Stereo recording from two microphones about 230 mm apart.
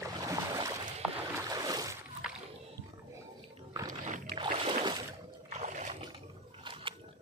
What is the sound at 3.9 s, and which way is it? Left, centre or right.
Boat, right.